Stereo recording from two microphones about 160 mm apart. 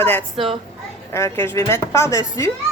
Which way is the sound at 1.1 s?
15° left (ahead or behind).